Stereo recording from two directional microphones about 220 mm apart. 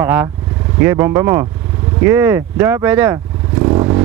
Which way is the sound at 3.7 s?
20° right (ahead or behind).